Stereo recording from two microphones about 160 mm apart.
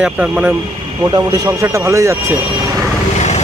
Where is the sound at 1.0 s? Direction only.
25° right (ahead or behind).